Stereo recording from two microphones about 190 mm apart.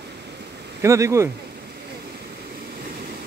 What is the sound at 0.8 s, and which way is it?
Speech, 15° right (ahead or behind).